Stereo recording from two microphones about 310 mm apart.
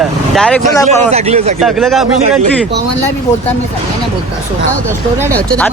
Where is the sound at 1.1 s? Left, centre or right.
Centre.